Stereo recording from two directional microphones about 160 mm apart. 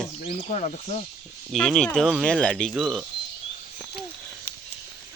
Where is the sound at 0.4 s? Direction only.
50° left (ahead or behind).